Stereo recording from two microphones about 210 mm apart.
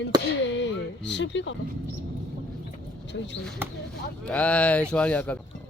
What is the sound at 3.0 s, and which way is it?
Speech, 55° left (ahead or behind).